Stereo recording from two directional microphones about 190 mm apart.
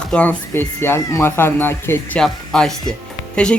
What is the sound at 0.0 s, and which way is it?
Speech, 5° left (ahead or behind).